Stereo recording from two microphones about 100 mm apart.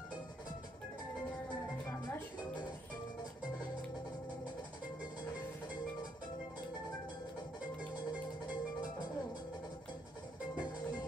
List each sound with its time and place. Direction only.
7.9 s music: 15° right (ahead or behind)